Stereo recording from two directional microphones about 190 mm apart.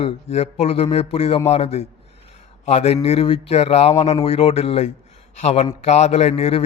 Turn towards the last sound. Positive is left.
turn(degrees=30)  # may be behind; listen again after turning